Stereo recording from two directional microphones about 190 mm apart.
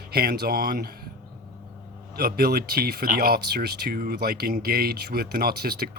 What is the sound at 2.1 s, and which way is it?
Speech, 55° right (ahead or behind).